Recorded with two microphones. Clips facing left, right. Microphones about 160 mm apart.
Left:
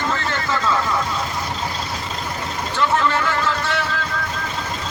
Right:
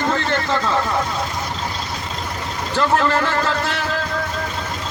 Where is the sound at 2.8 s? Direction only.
40° right (ahead or behind).